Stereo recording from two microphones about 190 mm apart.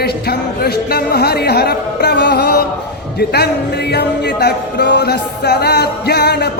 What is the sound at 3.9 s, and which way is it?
Music, 60° left (ahead or behind).